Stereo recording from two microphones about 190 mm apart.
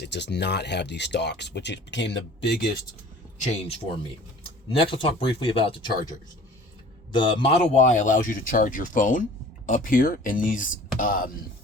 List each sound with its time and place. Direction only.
0.0 s speech: 65° left (ahead or behind)
3.4 s speech: 30° left (ahead or behind)
4.8 s speech: 30° left (ahead or behind)
7.1 s speech: 25° left (ahead or behind); by 11.3 s 50° left (ahead or behind)